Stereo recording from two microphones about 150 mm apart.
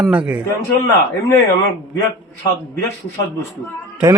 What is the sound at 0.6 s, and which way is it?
Speech, 20° left (ahead or behind).